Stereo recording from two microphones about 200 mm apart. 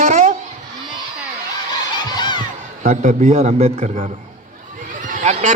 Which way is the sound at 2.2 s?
20° left (ahead or behind).